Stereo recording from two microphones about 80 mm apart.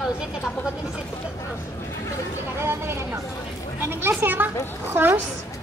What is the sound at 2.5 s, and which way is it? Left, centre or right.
A woman's voice, right.